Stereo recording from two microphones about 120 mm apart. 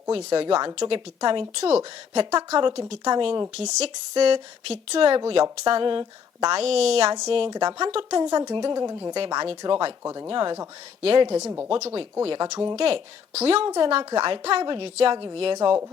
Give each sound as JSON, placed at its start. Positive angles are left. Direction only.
{"t": 0.1, "sound": "speech", "side_deg": -50}
{"t": 2.6, "sound": "speech", "side_deg": -45}
{"t": 3.5, "sound": "speech", "side_deg": -65}
{"t": 3.8, "sound": "speech", "side_deg": -55}
{"t": 6.6, "sound": "speech", "side_deg": -60}
{"t": 7.5, "sound": "speech", "side_deg": -35}
{"t": 9.1, "sound": "speech", "side_deg": -40}
{"t": 10.0, "sound": "speech", "side_deg": -25}
{"t": 10.2, "sound": "speech", "side_deg": -40}
{"t": 11.3, "sound": "speech", "side_deg": -25}
{"t": 12.4, "sound": "speech", "side_deg": -30}
{"t": 12.7, "sound": "speech", "side_deg": -50}
{"t": 13.7, "sound": "speech", "side_deg": -35}
{"t": 14.2, "sound": "speech", "side_deg": -50}